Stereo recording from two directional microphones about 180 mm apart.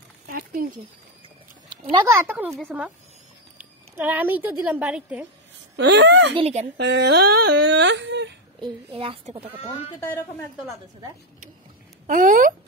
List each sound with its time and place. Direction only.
0.3 s a sound: 55° right (ahead or behind)
1.7 s a child's voice: 25° right (ahead or behind)
2.3 s speech: centre (ahead or behind)
3.5 s speech: 10° right (ahead or behind)
5.8 s speech: 70° right (ahead or behind)
6.3 s speech: 35° right (ahead or behind)
6.8 s speech: 70° right (ahead or behind)
8.5 s a woman's voice: 30° right (ahead or behind)
12.1 s speech: 50° right (ahead or behind)